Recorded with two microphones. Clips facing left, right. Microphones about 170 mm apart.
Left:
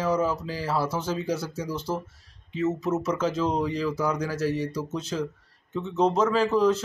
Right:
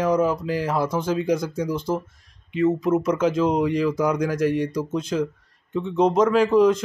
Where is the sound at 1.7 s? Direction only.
10° right (ahead or behind).